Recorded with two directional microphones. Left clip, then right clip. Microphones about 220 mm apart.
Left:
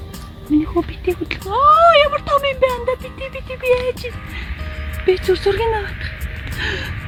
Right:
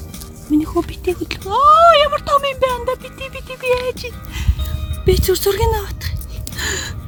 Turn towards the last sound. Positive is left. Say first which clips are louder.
# even
turn(degrees=-10)  # may be behind; listen again after turning